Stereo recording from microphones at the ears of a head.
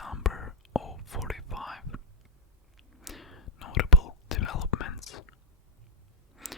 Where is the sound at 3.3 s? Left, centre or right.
Left.